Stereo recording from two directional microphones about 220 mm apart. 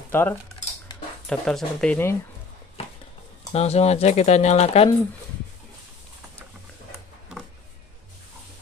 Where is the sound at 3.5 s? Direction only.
30° left (ahead or behind).